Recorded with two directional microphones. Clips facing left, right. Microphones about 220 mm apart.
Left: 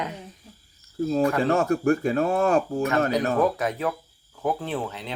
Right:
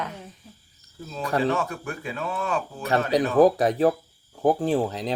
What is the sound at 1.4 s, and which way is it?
Speech, 45° left (ahead or behind).